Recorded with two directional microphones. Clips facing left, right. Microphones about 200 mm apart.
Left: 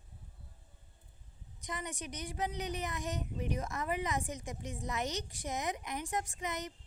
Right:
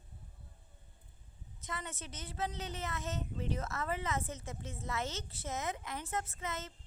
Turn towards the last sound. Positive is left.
turn(degrees=15)  # may be behind; listen again after turning